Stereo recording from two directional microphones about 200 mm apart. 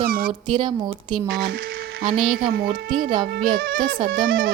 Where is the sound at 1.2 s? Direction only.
55° right (ahead or behind).